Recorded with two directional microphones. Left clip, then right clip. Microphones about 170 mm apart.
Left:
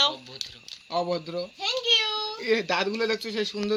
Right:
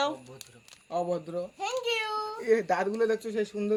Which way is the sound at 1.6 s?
15° right (ahead or behind).